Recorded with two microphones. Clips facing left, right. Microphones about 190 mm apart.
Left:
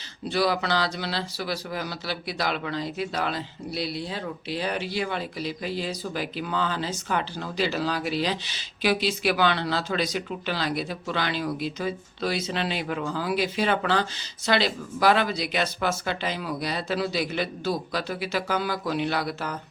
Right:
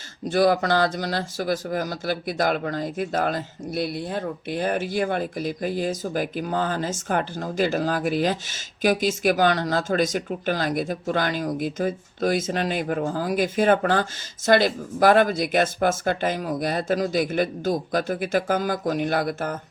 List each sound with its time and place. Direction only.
0.3 s speech: 50° right (ahead or behind)